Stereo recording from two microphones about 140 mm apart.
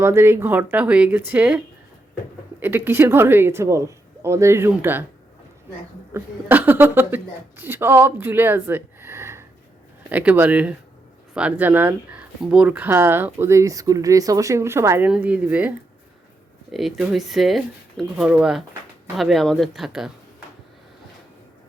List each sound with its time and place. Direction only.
0.0 s speech: 15° right (ahead or behind)
6.1 s speech: 15° right (ahead or behind)
16.7 s speech: centre (ahead or behind)